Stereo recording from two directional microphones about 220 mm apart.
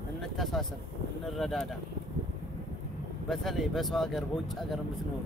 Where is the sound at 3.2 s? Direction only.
Centre (ahead or behind).